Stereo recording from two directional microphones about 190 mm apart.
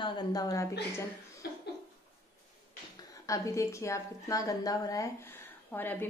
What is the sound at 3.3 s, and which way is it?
A woman's voice, 15° left (ahead or behind).